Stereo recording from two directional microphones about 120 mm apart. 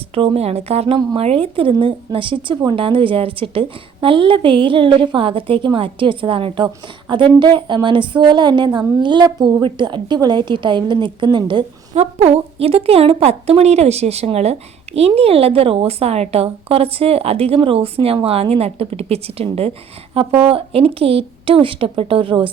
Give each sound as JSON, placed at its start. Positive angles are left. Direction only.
{"t": 0.1, "sound": "a woman's voice", "side_deg": -55}
{"t": 11.9, "sound": "a woman's voice", "side_deg": -60}